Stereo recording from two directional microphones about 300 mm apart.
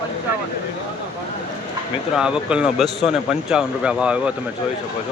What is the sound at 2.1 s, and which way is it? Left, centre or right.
Speech, centre.